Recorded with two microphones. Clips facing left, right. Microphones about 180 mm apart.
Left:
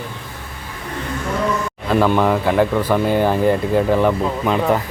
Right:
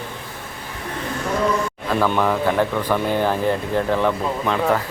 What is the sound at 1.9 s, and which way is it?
Speech, 10° left (ahead or behind).